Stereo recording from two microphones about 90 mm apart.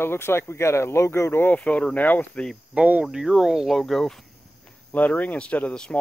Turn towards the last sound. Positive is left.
turn(degrees=10)  # may be behind; listen again after turning